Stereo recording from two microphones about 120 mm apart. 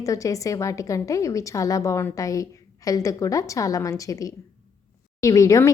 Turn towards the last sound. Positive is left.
turn(degrees=25)  # may be behind; listen again after turning